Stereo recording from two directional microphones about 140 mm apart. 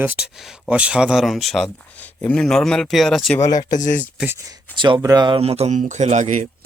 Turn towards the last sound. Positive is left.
turn(degrees=-60)  # may be behind; listen again after turning